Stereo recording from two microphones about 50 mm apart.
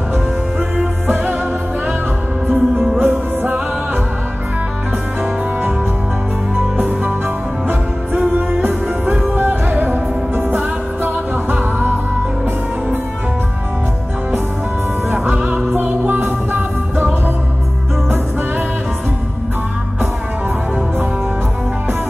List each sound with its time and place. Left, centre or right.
1.0 s music: right
2.5 s music: right
3.0 s music: right
5.2 s music: right
6.8 s music: right
8.4 s music: right
15.7 s music: right